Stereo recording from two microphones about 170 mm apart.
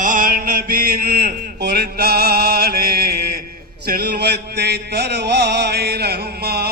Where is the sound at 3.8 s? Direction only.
65° right (ahead or behind).